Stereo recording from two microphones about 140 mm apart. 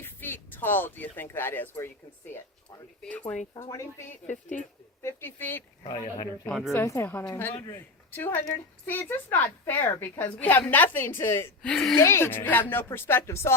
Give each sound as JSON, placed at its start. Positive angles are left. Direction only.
{"t": 0.0, "sound": "speech", "side_deg": 15}
{"t": 3.5, "sound": "speech", "side_deg": 20}
{"t": 4.3, "sound": "speech", "side_deg": 60}
{"t": 5.0, "sound": "speech", "side_deg": 15}
{"t": 5.8, "sound": "speech", "side_deg": 30}
{"t": 6.5, "sound": "a woman's voice", "side_deg": 0}
{"t": 6.7, "sound": "speech", "side_deg": 20}
{"t": 11.7, "sound": "a woman's voice", "side_deg": 5}
{"t": 11.9, "sound": "speech", "side_deg": 20}